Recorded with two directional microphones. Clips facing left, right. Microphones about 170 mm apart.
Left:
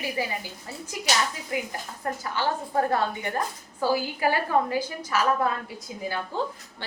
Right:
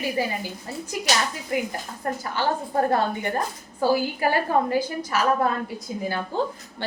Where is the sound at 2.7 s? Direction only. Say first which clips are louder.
Right 2 dB; 40° right (ahead or behind).